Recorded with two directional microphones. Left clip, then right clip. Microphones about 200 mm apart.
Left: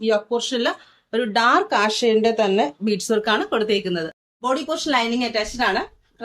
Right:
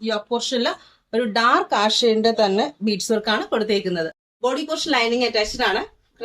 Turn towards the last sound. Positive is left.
turn(degrees=15)  # may be behind; listen again after turning